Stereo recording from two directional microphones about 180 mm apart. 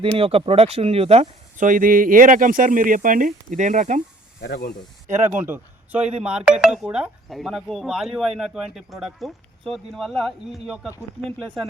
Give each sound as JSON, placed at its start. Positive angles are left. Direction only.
{"t": 0.2, "sound": "speech", "side_deg": -35}
{"t": 4.4, "sound": "speech", "side_deg": 70}
{"t": 5.0, "sound": "speech", "side_deg": -40}
{"t": 5.3, "sound": "speech", "side_deg": -10}